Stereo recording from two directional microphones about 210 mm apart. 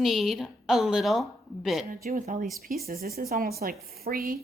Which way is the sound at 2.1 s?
40° right (ahead or behind).